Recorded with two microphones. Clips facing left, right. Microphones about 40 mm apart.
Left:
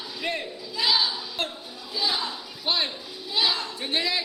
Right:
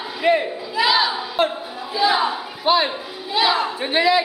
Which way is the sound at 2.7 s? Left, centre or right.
Right.